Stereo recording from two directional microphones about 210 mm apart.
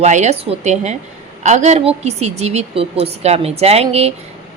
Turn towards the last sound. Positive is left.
turn(degrees=-30)  # may be behind; listen again after turning